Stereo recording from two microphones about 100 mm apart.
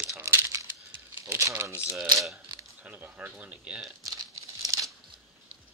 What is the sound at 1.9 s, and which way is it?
Speech, centre (ahead or behind).